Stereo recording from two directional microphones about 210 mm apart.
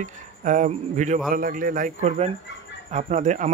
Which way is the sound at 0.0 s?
35° right (ahead or behind).